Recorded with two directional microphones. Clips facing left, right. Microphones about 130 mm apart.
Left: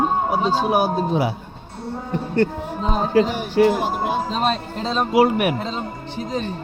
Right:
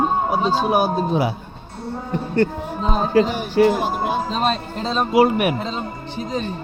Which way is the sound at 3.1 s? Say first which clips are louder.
Even; 40° right (ahead or behind).